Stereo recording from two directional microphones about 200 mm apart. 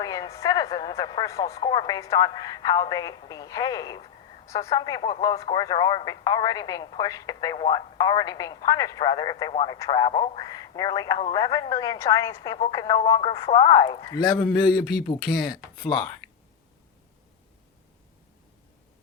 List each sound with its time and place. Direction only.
0.0 s a woman's voice: 15° left (ahead or behind)